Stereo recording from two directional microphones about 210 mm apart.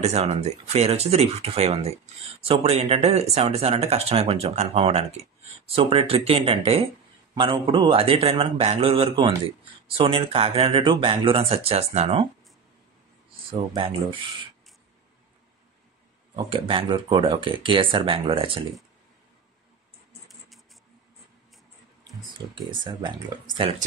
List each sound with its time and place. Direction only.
0.0 s speech: 30° right (ahead or behind)
13.3 s speech: 25° right (ahead or behind)
16.4 s speech: 25° right (ahead or behind)
20.2 s a sound: centre (ahead or behind)
22.0 s speech: 20° right (ahead or behind)